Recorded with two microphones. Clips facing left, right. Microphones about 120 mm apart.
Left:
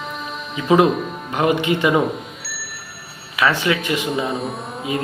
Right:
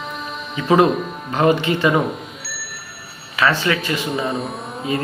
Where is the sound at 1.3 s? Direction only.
15° left (ahead or behind).